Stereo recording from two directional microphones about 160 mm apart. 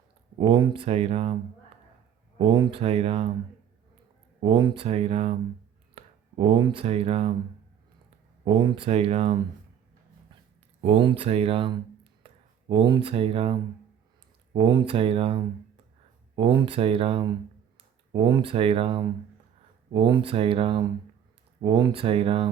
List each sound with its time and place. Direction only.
0.3 s speech: 30° right (ahead or behind)
2.4 s speech: 30° right (ahead or behind)
4.4 s speech: 30° right (ahead or behind)
8.4 s speech: 35° right (ahead or behind)
10.8 s speech: 40° right (ahead or behind)